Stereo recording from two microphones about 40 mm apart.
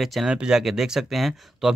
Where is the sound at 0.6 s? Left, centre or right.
Centre.